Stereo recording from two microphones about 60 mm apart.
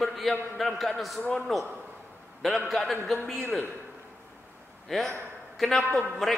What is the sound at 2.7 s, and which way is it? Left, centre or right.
Speech, centre.